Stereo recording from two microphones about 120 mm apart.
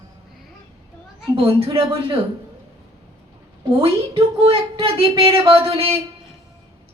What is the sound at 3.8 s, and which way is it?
A woman's voice, 50° right (ahead or behind).